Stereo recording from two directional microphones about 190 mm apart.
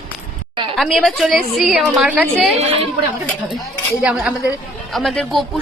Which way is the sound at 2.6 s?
30° right (ahead or behind).